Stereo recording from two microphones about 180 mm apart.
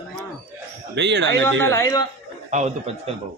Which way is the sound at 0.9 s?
75° right (ahead or behind).